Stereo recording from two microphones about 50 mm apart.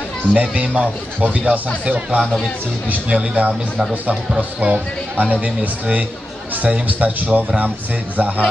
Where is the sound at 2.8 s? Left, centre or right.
Right.